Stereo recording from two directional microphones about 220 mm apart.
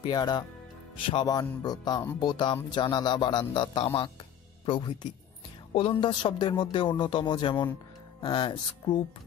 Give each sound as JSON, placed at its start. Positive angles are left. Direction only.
{"t": 0.0, "sound": "speech", "side_deg": 20}